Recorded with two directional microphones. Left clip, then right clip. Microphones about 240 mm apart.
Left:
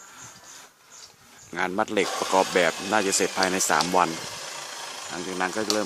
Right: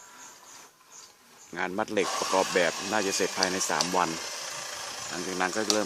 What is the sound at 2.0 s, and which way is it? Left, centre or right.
Speech, right.